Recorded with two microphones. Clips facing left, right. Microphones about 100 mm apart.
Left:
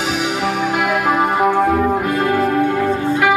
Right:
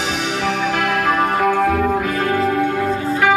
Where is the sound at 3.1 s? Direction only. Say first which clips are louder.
Even; 5° left (ahead or behind).